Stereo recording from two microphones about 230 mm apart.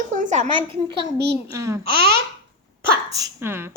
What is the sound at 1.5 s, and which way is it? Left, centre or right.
Speech, centre.